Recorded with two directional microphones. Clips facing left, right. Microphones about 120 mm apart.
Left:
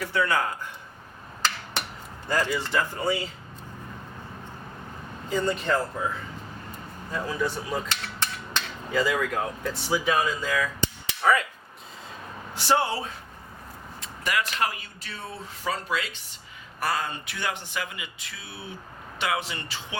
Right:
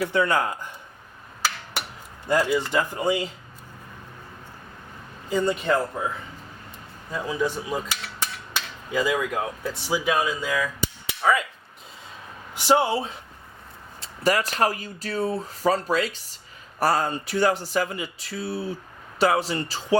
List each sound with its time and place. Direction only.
0.1 s speech: 20° right (ahead or behind)
1.4 s a sound: 5° right (ahead or behind)
2.3 s speech: 10° right (ahead or behind)
5.3 s speech: 10° right (ahead or behind)
7.1 s cutlery: 10° right (ahead or behind)
12.5 s speech: 15° right (ahead or behind)
14.0 s speech: 35° right (ahead or behind)